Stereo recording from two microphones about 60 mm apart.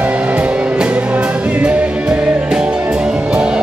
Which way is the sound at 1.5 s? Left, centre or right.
Centre.